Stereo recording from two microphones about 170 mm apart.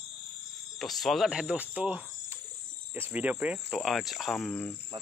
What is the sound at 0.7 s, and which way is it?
Speech, centre (ahead or behind).